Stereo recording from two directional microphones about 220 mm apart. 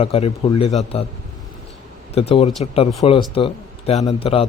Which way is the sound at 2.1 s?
25° left (ahead or behind).